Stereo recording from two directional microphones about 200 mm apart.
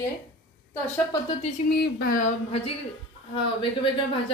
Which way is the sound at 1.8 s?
45° left (ahead or behind).